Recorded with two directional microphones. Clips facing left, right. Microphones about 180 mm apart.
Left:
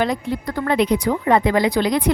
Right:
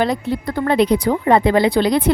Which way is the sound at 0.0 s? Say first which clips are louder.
Right 2 dB; 30° right (ahead or behind).